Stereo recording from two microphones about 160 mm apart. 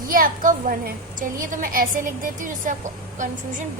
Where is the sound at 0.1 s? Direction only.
60° right (ahead or behind).